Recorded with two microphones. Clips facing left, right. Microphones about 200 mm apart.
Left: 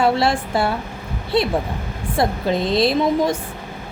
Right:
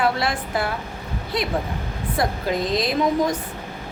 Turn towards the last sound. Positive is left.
turn(degrees=30)  # may be behind; listen again after turning